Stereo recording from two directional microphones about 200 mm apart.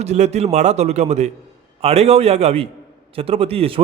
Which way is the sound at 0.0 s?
35° right (ahead or behind).